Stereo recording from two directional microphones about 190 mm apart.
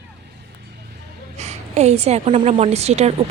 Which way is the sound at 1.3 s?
35° right (ahead or behind).